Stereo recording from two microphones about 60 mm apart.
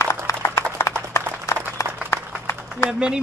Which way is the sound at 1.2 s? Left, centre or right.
Left.